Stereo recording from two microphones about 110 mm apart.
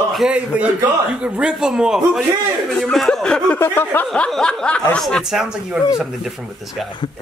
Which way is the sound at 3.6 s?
20° left (ahead or behind).